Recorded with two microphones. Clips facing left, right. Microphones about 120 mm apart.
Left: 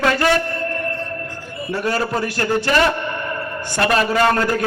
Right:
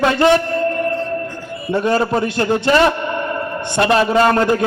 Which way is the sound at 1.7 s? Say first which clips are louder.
Right 5 dB; 25° right (ahead or behind).